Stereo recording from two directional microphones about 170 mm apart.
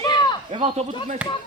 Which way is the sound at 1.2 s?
5° right (ahead or behind).